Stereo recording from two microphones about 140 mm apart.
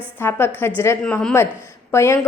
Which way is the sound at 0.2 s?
15° left (ahead or behind).